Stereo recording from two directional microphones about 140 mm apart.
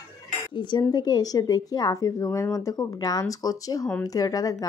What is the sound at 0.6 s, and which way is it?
Speech, 35° left (ahead or behind).